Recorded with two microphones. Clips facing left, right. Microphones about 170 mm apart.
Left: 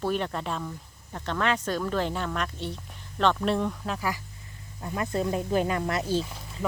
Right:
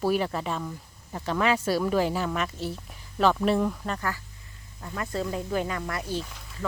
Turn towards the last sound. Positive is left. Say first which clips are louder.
# left 4 dB
turn(degrees=30)  # may be behind; listen again after turning